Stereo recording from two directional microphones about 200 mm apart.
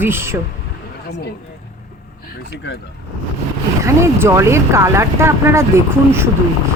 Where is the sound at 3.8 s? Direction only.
15° right (ahead or behind).